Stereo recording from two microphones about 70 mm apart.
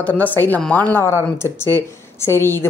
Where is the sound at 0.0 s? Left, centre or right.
Left.